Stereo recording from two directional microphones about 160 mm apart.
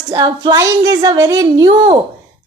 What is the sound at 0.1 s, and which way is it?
Speech, 25° right (ahead or behind).